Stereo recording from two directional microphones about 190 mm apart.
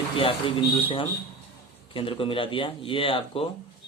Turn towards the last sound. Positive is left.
turn(degrees=30)  # may be behind; listen again after turning